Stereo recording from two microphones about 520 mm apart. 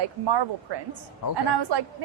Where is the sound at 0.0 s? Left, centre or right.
Right.